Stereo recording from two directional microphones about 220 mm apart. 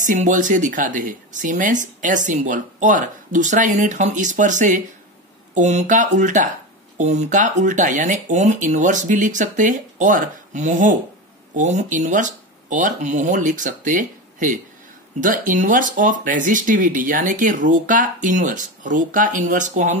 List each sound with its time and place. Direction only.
0.0 s speech: 35° right (ahead or behind)